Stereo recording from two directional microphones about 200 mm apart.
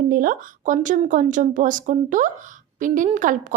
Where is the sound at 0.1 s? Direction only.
45° right (ahead or behind).